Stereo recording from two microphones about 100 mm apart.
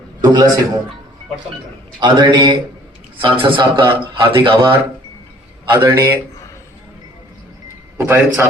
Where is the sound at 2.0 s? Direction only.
50° right (ahead or behind).